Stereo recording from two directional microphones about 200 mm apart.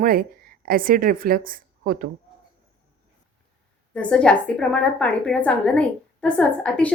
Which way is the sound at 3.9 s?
5° left (ahead or behind).